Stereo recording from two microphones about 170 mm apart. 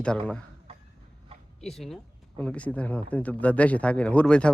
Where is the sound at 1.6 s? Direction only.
Centre (ahead or behind).